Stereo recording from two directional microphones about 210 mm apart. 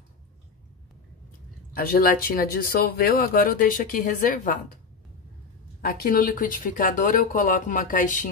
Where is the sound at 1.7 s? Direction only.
45° left (ahead or behind).